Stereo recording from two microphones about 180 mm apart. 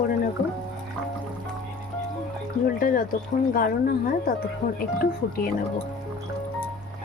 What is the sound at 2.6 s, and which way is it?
Speech, 50° left (ahead or behind).